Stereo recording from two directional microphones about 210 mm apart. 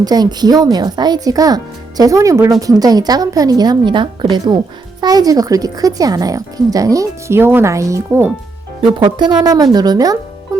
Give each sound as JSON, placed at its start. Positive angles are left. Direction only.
{"t": 0.0, "sound": "speech", "side_deg": -20}
{"t": 10.5, "sound": "music", "side_deg": -15}